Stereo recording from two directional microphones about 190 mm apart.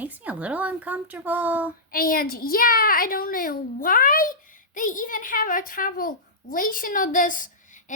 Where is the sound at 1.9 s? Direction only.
50° left (ahead or behind).